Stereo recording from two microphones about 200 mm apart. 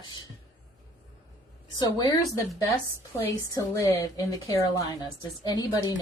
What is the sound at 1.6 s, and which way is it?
Speech, 20° left (ahead or behind).